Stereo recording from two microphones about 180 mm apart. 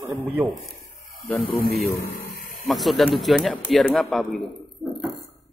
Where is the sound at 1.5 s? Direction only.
55° left (ahead or behind).